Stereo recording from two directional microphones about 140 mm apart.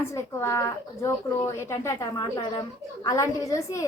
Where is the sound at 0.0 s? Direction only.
20° left (ahead or behind).